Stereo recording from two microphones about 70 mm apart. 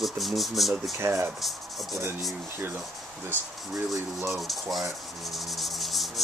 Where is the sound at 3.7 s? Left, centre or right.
Centre.